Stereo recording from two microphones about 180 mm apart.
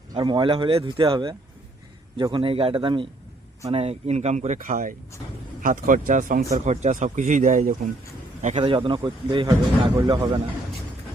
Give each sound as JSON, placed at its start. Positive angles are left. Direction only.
{"t": 0.1, "sound": "speech", "side_deg": -25}
{"t": 8.5, "sound": "speech", "side_deg": -30}